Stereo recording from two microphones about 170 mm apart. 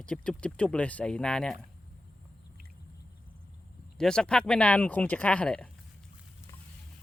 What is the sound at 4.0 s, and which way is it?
Speech, 5° left (ahead or behind).